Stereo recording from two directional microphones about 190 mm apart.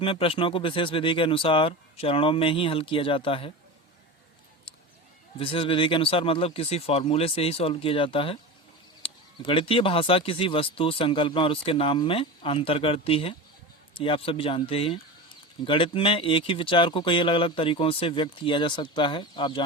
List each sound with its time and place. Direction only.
0.0 s speech: 30° left (ahead or behind)
5.4 s speech: 30° left (ahead or behind)